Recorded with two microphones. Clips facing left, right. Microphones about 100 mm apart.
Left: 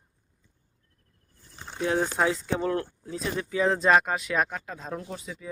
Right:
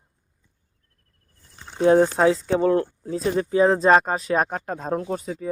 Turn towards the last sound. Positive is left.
turn(degrees=-45)  # may be behind; listen again after turning